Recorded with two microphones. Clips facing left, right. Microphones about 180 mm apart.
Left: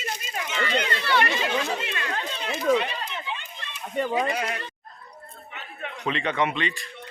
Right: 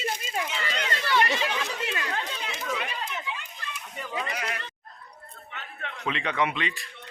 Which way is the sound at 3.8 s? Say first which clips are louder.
Left 16 dB; 75° left (ahead or behind).